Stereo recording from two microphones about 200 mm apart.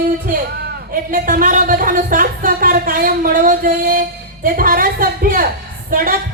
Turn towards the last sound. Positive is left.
turn(degrees=-45)  # may be behind; listen again after turning